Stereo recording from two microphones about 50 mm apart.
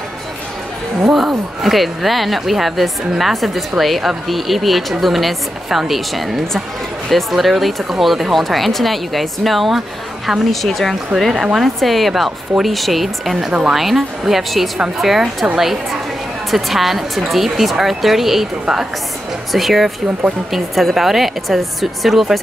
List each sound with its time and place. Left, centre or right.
1.0 s speech: centre
13.5 s a woman's voice: right
13.7 s speech: centre
19.5 s speech: centre